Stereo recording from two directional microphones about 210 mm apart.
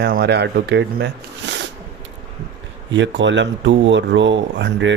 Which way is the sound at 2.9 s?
60° right (ahead or behind).